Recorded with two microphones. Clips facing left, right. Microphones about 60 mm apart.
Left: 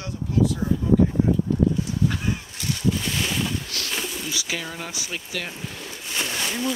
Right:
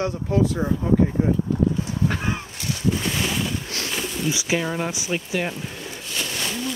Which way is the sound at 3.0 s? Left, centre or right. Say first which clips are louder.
Right 2 dB; centre.